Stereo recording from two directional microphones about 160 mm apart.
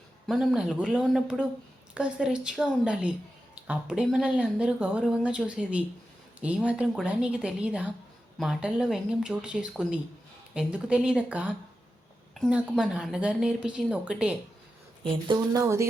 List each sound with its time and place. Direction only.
0.3 s a woman's voice: 5° right (ahead or behind)
15.0 s speech: 25° right (ahead or behind)